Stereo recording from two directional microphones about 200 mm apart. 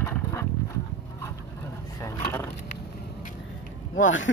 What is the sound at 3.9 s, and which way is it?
Speech, 70° left (ahead or behind).